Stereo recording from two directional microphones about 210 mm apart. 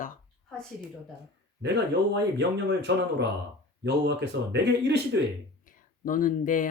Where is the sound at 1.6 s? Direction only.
55° right (ahead or behind).